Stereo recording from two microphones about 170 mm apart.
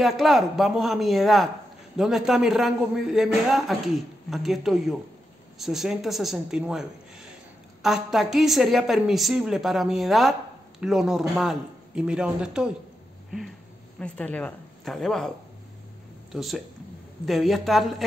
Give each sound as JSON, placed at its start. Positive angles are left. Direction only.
{"t": 0.0, "sound": "speech", "side_deg": 0}
{"t": 13.9, "sound": "a woman's voice", "side_deg": 5}